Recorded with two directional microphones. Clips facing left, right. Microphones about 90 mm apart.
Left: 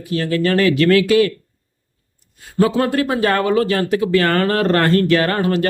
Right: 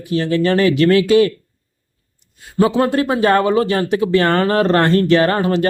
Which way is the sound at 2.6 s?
20° right (ahead or behind).